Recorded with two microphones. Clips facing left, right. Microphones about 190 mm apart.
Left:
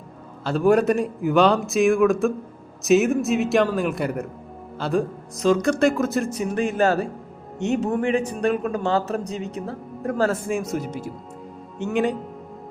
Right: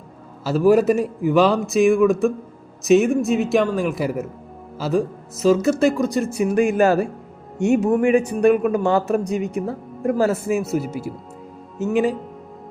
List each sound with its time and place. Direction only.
0.4 s a man's voice: centre (ahead or behind)
6.3 s a man's voice: 10° right (ahead or behind)